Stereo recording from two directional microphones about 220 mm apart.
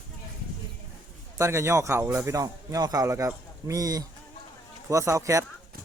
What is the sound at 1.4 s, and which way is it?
Speech, 10° right (ahead or behind).